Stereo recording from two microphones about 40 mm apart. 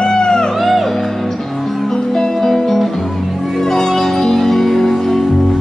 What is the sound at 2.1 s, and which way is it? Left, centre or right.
Music, centre.